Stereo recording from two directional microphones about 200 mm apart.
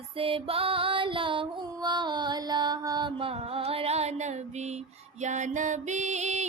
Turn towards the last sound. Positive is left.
turn(degrees=-35)  # may be behind; listen again after turning